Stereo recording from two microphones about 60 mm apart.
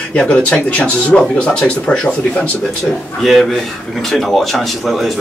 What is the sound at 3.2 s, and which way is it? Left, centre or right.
Speech, centre.